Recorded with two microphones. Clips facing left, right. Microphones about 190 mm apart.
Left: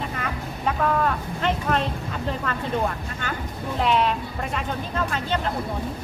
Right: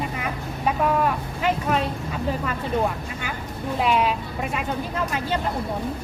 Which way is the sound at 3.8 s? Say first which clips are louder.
Even; 5° right (ahead or behind).